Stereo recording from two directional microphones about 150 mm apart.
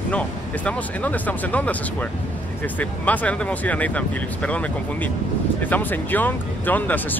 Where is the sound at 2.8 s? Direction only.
10° left (ahead or behind).